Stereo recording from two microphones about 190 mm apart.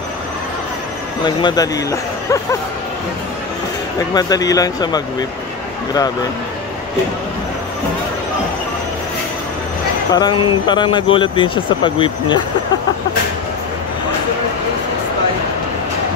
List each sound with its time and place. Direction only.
1.2 s speech: 20° left (ahead or behind)
4.1 s speech: 20° left (ahead or behind)
10.1 s speech: 25° left (ahead or behind)